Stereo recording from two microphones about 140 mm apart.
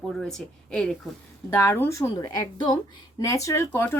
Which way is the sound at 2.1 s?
30° left (ahead or behind).